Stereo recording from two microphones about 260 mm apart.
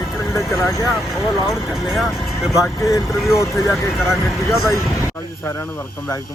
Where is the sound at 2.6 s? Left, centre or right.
Centre.